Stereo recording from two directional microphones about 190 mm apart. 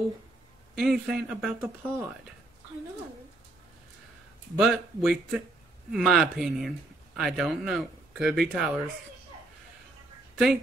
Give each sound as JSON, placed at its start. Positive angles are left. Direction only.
{"t": 0.7, "sound": "speech", "side_deg": -5}
{"t": 4.6, "sound": "speech", "side_deg": -5}